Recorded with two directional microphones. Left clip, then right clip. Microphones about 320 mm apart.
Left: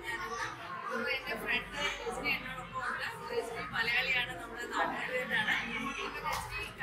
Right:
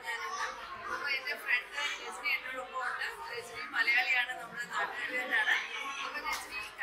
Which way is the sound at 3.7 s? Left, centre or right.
Centre.